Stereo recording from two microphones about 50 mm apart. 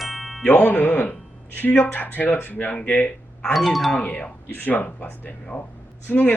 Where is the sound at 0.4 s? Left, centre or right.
Left.